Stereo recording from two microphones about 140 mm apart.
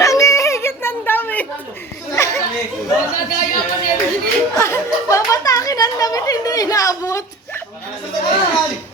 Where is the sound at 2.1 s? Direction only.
20° left (ahead or behind).